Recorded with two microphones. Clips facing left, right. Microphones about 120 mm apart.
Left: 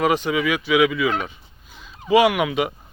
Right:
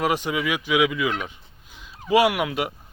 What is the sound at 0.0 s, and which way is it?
Speech, 10° right (ahead or behind).